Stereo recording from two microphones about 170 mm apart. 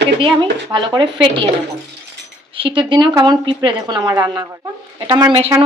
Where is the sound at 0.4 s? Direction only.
25° right (ahead or behind).